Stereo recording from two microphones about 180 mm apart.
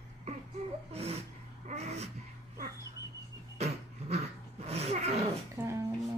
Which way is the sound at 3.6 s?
35° right (ahead or behind).